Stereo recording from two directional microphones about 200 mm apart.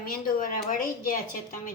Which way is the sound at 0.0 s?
45° left (ahead or behind).